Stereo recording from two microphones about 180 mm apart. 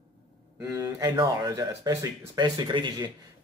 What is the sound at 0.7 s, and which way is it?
Speech, 20° right (ahead or behind).